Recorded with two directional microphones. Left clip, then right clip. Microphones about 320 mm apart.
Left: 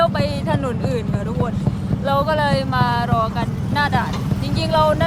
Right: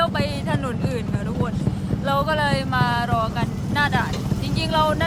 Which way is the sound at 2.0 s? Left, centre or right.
Centre.